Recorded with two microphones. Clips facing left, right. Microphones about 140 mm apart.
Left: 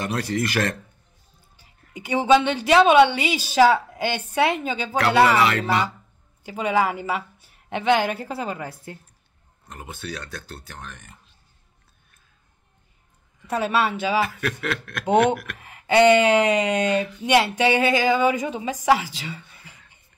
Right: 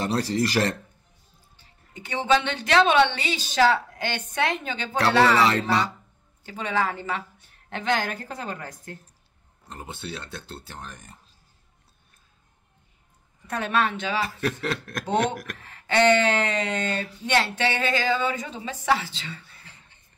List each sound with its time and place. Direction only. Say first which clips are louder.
0.0 s speech: right 1 dB; 30° right (ahead or behind)
1.6 s a woman's voice: left 4 dB; 10° left (ahead or behind)
5.4 s speech: left 1 dB; 35° right (ahead or behind)
6.4 s a woman's voice: left 5 dB; 10° left (ahead or behind)
9.7 s speech: left 1 dB; 30° right (ahead or behind)
13.5 s a woman's voice: left 3 dB; 5° left (ahead or behind)
14.2 s speech: left 1 dB; 35° right (ahead or behind)
15.6 s a woman's voice: left 4 dB; 10° left (ahead or behind)